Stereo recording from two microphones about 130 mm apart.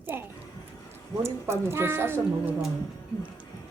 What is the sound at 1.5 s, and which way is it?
A woman's voice, 20° right (ahead or behind).